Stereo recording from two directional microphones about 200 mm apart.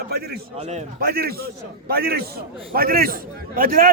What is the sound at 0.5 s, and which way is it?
Speech, 35° right (ahead or behind).